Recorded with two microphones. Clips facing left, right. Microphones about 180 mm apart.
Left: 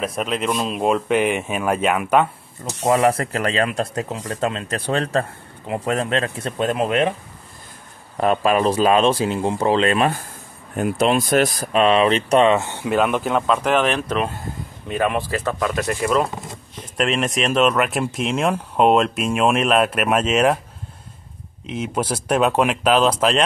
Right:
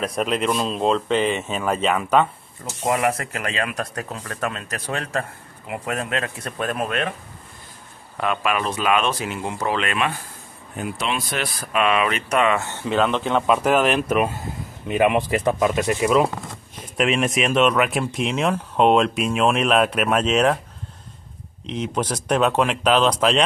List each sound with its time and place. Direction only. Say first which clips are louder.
0.0 s speech: right 1 dB; centre (ahead or behind)
2.8 s speech: left 4 dB; 30° left (ahead or behind)
8.2 s speech: left 6 dB; 35° left (ahead or behind)
10.8 s speech: left 8 dB; 45° left (ahead or behind); by 13.4 s 5° left (ahead or behind)
13.5 s speech: right 1 dB; 5° right (ahead or behind)
15.9 s speech: even; 5° right (ahead or behind)
21.6 s speech: left 1 dB; 5° left (ahead or behind)